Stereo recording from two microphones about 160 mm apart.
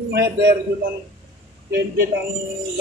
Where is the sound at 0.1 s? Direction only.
90° right.